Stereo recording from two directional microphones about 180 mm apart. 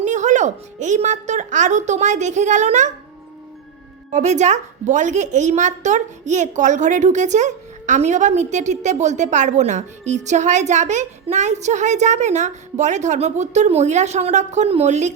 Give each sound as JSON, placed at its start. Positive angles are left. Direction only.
{"t": 0.0, "sound": "a woman's voice", "side_deg": -40}
{"t": 4.1, "sound": "a woman's voice", "side_deg": -40}